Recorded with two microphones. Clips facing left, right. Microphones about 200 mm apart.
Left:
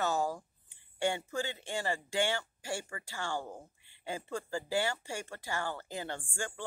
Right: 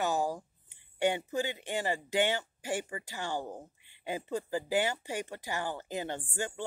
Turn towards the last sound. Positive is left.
turn(degrees=-20)  # may be behind; listen again after turning